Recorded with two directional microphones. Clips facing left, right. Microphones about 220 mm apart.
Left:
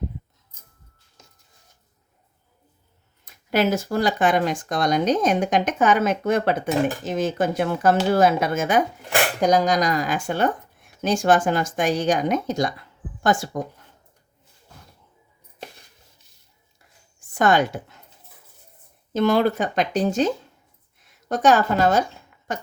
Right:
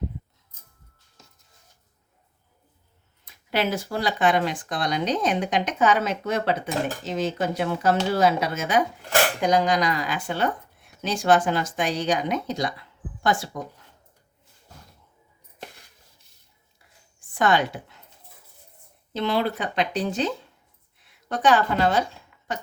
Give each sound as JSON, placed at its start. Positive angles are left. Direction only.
{"t": 3.2, "sound": "speech", "side_deg": 45}
{"t": 17.2, "sound": "a woman's voice", "side_deg": 45}
{"t": 19.1, "sound": "a woman's voice", "side_deg": 45}